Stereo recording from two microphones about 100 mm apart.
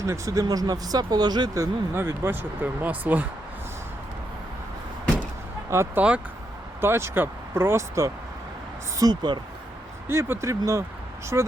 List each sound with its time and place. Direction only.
0.0 s speech: 30° right (ahead or behind)
1.9 s speech: 20° right (ahead or behind)
5.7 s speech: 30° right (ahead or behind)
9.0 s speech: 45° right (ahead or behind)
10.1 s speech: 25° right (ahead or behind)